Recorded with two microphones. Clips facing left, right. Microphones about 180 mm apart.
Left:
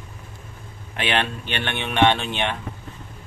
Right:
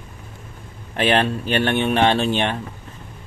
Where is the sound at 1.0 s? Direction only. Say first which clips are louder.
Right 6 dB; 40° right (ahead or behind).